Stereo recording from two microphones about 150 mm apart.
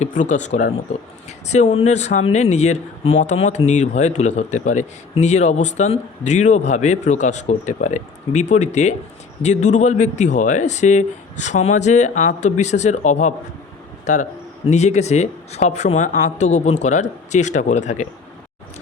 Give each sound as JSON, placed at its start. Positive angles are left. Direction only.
{"t": 0.0, "sound": "a man's voice", "side_deg": 55}